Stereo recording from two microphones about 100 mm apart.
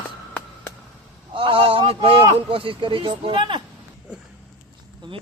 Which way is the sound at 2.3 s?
65° right (ahead or behind).